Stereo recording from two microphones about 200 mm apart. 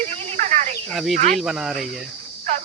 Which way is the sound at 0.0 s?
35° right (ahead or behind).